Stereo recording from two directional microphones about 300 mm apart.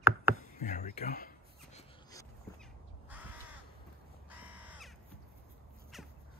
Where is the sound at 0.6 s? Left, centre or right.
Left.